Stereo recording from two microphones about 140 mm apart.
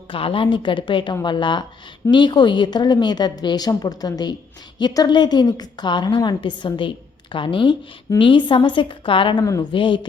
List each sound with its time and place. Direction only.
0.1 s a woman's voice: 40° left (ahead or behind)
9.4 s a woman's voice: 25° left (ahead or behind)
9.7 s a woman's voice: 35° left (ahead or behind)